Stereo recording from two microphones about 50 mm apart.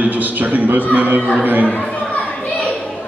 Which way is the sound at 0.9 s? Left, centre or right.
Right.